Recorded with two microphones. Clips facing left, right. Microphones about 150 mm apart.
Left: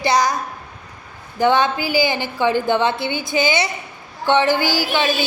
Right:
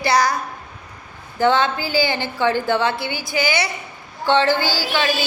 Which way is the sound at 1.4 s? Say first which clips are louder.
Left 1 dB; 15° left (ahead or behind).